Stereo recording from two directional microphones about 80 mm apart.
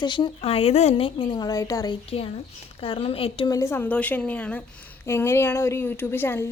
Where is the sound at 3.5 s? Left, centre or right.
Left.